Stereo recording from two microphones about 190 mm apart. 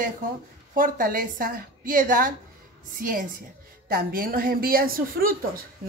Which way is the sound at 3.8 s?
50° right (ahead or behind).